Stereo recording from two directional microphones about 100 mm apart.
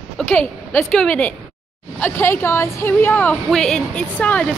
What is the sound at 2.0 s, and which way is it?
A woman's voice, 25° left (ahead or behind).